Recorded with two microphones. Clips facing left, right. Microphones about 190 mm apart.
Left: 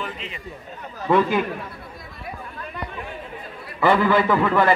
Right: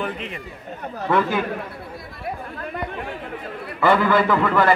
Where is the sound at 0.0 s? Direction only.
55° right (ahead or behind).